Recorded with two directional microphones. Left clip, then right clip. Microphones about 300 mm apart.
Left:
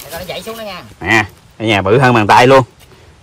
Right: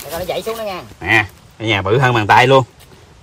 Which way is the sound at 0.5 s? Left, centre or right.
Right.